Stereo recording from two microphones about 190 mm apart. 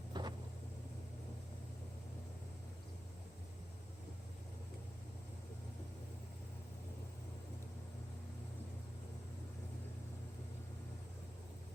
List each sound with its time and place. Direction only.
0.1 s vehicle: 25° right (ahead or behind)